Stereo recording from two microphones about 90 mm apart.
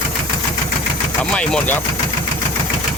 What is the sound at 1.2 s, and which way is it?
Speech, 10° left (ahead or behind).